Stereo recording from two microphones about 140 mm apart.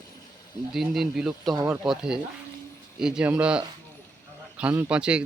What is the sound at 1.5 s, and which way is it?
Speech, 20° right (ahead or behind).